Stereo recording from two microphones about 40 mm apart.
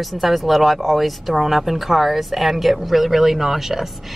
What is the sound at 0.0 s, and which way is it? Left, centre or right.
Speech, centre.